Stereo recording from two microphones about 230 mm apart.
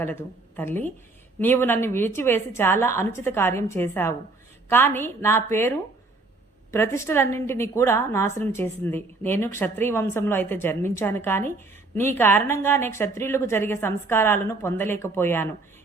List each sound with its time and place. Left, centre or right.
0.0 s a woman's voice: centre